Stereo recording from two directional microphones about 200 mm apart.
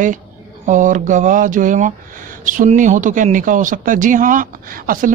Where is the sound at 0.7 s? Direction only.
40° right (ahead or behind).